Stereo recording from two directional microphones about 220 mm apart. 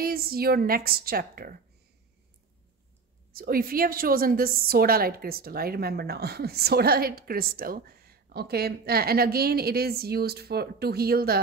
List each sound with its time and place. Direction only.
0.0 s a woman's voice: 45° right (ahead or behind)
3.3 s a woman's voice: 40° right (ahead or behind)